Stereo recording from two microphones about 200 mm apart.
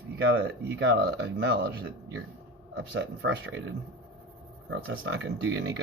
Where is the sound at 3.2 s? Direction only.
65° right (ahead or behind).